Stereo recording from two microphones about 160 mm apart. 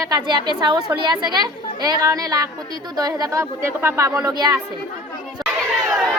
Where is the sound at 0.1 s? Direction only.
30° right (ahead or behind).